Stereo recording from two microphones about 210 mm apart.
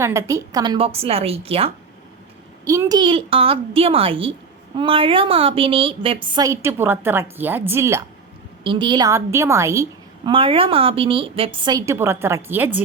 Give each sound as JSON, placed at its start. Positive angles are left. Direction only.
{"t": 0.0, "sound": "a woman's voice", "side_deg": -15}
{"t": 2.6, "sound": "a woman's voice", "side_deg": -15}
{"t": 8.6, "sound": "a woman's voice", "side_deg": -25}
{"t": 10.3, "sound": "a woman's voice", "side_deg": -25}